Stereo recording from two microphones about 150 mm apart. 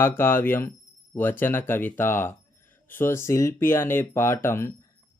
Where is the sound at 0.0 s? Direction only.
15° left (ahead or behind).